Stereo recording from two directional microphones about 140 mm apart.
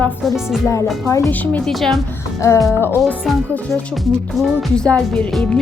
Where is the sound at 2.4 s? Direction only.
20° left (ahead or behind).